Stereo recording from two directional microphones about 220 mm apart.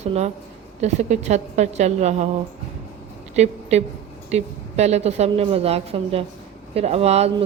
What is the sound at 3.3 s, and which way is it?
A woman's voice, 30° right (ahead or behind).